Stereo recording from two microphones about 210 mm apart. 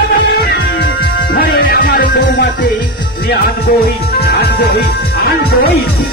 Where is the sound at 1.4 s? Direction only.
45° left (ahead or behind).